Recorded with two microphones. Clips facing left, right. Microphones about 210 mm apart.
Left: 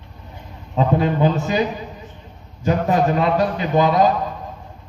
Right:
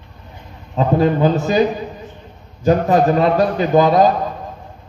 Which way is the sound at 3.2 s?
40° right (ahead or behind).